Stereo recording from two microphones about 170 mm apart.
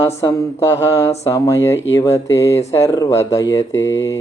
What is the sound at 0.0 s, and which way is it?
Speech, 15° left (ahead or behind).